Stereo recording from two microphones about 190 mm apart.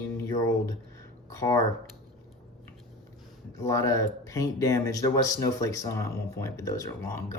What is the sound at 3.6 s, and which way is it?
Speech, 15° left (ahead or behind).